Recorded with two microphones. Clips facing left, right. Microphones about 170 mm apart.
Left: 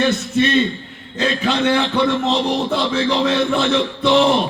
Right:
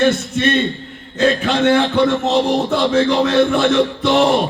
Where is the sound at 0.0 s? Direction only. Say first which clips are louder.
Right 2 dB; 50° right (ahead or behind).